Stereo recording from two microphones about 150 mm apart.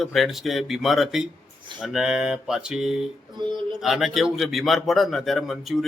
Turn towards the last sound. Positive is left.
turn(degrees=0)  # may be behind; listen again after turning